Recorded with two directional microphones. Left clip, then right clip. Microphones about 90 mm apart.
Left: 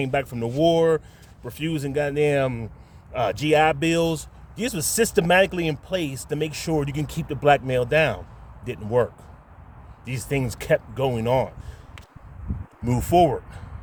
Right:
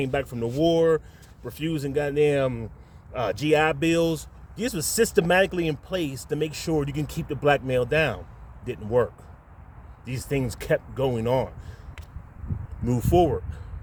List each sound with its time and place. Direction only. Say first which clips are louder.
0.0 s speech: left 2 dB; 60° left (ahead or behind)
10.1 s speech: left 1 dB; 60° left (ahead or behind)
12.8 s speech: left 3 dB; 60° left (ahead or behind)